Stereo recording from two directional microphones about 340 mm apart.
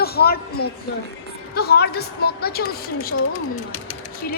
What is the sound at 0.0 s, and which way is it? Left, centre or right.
A woman's voice, left.